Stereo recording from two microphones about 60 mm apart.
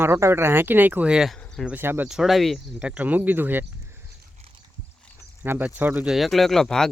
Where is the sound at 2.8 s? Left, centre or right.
Right.